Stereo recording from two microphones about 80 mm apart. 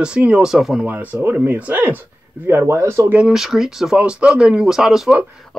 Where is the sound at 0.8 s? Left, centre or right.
Right.